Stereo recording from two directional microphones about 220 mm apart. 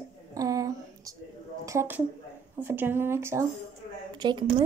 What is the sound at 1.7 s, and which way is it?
Speech, 10° right (ahead or behind).